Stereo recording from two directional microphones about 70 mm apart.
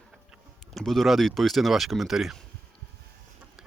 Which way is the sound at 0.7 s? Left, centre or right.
Centre.